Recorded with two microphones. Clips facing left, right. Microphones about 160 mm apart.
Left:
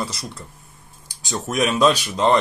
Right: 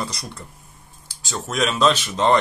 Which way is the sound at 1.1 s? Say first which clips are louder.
Left 3 dB; 20° left (ahead or behind).